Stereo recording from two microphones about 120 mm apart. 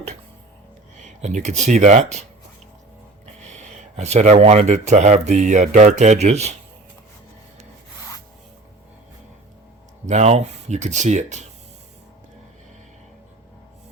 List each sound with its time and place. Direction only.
0.9 s speech: 80° right
3.5 s speech: 70° right (ahead or behind)
10.1 s speech: 70° right (ahead or behind)